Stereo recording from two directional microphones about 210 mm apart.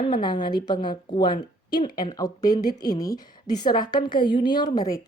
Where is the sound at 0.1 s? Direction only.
20° left (ahead or behind).